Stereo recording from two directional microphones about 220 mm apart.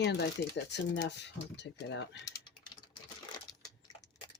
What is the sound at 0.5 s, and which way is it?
Speech, 50° left (ahead or behind).